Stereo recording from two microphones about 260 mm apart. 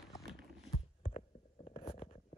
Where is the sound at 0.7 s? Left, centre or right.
Left.